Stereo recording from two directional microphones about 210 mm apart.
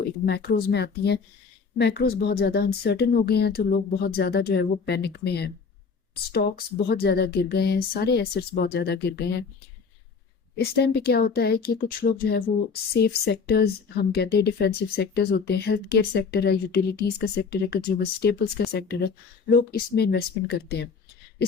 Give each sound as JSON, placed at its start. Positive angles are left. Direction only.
{"t": 0.0, "sound": "speech", "side_deg": 50}
{"t": 10.6, "sound": "speech", "side_deg": 50}